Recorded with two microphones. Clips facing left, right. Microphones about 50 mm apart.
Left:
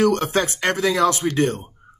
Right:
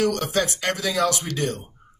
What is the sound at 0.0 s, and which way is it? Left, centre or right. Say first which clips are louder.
Speech: left 4 dB; left.